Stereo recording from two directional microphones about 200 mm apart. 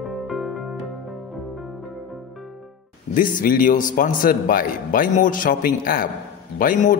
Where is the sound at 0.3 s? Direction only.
Centre (ahead or behind).